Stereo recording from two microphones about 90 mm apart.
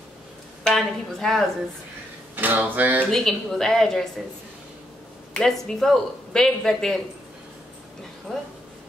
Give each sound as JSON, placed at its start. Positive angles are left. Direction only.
{"t": 0.7, "sound": "speech", "side_deg": 5}
{"t": 2.3, "sound": "a sound", "side_deg": -20}
{"t": 3.0, "sound": "speech", "side_deg": 5}
{"t": 5.3, "sound": "speech", "side_deg": 5}
{"t": 8.3, "sound": "speech", "side_deg": 5}